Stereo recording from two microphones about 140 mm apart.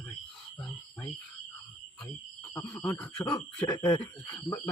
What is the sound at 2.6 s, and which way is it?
Speech, 25° left (ahead or behind).